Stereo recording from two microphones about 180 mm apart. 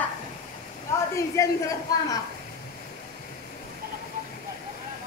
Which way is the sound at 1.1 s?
15° left (ahead or behind).